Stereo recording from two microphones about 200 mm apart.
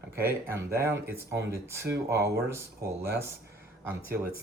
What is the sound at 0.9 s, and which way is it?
Speech, 60° right (ahead or behind).